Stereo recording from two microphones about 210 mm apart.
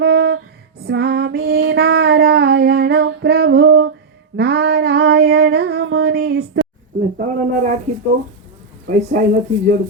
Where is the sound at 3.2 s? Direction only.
50° right (ahead or behind); by 3.9 s 65° right (ahead or behind).